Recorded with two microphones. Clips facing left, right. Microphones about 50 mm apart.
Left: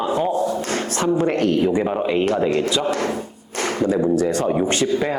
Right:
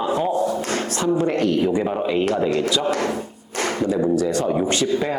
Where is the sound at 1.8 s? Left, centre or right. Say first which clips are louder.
Left 1 dB; centre.